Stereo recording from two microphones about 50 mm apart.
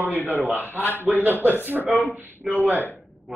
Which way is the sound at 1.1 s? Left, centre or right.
Centre.